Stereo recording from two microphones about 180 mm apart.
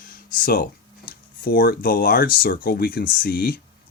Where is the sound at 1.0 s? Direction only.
55° left (ahead or behind).